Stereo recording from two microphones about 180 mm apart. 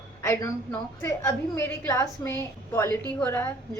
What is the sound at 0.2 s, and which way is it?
A woman's voice, 15° left (ahead or behind).